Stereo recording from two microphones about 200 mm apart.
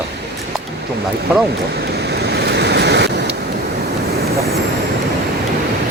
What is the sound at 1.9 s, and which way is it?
Waves, 55° right (ahead or behind).